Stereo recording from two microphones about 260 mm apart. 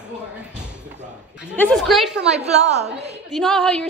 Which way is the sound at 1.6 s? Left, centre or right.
Centre.